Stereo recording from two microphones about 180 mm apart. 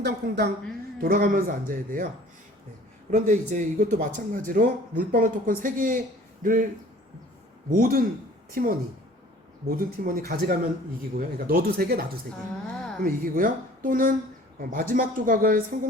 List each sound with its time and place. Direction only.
0.0 s speech: 65° right (ahead or behind)
0.9 s speech: 55° right (ahead or behind)
3.1 s speech: 45° right (ahead or behind)
7.7 s speech: 50° right (ahead or behind)